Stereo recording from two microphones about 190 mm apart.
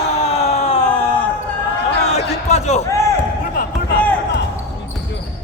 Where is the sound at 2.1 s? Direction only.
35° left (ahead or behind).